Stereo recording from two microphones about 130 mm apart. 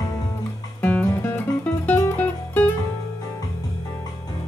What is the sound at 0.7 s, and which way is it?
Music, 15° left (ahead or behind).